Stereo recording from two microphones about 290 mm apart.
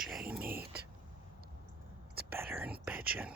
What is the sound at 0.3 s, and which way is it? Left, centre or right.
Dog, centre.